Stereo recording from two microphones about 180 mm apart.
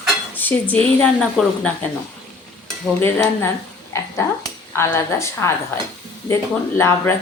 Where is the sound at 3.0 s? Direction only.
10° left (ahead or behind).